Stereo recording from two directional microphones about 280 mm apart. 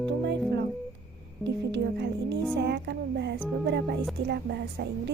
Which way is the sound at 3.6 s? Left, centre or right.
Right.